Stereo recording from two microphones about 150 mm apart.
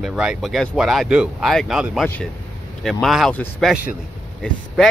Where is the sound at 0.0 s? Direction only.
5° right (ahead or behind).